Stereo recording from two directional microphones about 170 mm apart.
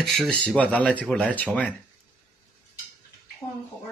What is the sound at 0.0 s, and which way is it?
Speech, centre (ahead or behind).